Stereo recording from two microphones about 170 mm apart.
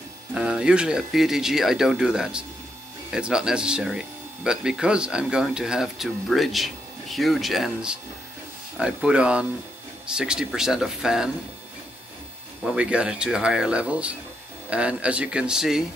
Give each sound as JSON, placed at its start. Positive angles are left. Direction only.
{"t": 0.3, "sound": "speech", "side_deg": -5}
{"t": 12.6, "sound": "speech", "side_deg": -5}